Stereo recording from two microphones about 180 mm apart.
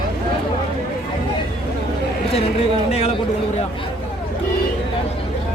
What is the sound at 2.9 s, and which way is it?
Speech, 35° left (ahead or behind).